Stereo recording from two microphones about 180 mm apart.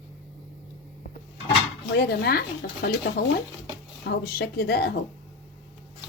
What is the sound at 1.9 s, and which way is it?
Speech, 65° left (ahead or behind).